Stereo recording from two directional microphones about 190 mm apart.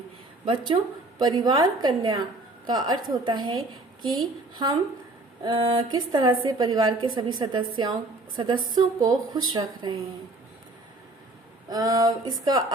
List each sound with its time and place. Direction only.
0.4 s a woman's voice: 25° right (ahead or behind)
5.4 s a woman's voice: 25° right (ahead or behind)
11.7 s a woman's voice: 20° right (ahead or behind)